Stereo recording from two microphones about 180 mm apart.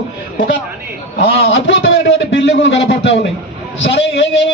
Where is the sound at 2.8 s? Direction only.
75° left (ahead or behind).